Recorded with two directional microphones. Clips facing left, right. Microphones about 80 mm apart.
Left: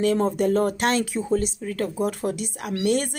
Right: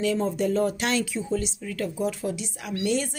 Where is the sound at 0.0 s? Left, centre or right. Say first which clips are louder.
Left 4 dB; left.